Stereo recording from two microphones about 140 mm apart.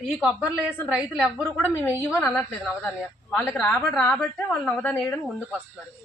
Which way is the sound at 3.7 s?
15° left (ahead or behind).